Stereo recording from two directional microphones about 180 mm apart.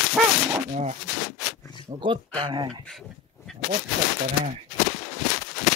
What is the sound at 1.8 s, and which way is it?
Speech, 30° right (ahead or behind).